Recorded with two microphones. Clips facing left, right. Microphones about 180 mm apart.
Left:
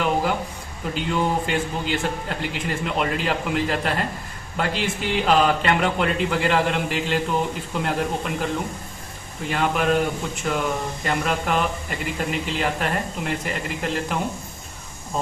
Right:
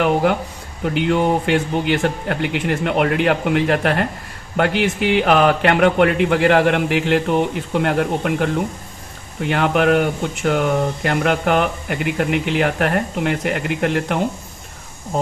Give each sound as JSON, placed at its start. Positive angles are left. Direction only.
{"t": 0.0, "sound": "speech", "side_deg": -65}